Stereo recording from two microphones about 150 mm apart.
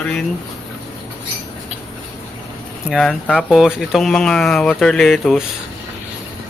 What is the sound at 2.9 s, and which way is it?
Speech, centre (ahead or behind).